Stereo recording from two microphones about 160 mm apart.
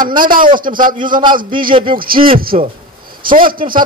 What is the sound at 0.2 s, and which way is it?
Speech, 60° right (ahead or behind).